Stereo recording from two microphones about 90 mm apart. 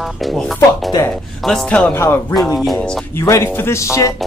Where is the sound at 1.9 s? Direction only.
25° left (ahead or behind).